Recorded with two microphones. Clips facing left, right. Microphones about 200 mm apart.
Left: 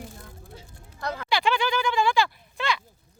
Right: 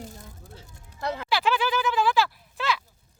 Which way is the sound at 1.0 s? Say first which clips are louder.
Right 2 dB; 25° right (ahead or behind).